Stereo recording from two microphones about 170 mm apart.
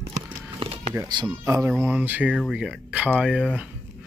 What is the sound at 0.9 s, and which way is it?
Speech, 20° right (ahead or behind).